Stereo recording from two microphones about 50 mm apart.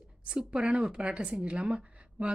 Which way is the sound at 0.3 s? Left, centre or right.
Centre.